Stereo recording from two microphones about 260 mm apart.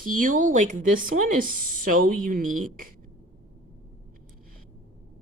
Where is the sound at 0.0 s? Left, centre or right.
Right.